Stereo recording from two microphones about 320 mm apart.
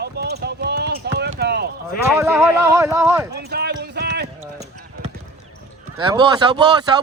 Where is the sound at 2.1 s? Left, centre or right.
Centre.